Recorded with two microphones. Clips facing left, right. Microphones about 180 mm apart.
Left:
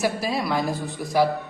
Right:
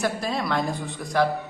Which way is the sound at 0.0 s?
5° left (ahead or behind).